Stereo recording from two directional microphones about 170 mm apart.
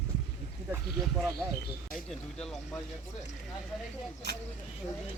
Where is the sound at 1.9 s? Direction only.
5° left (ahead or behind).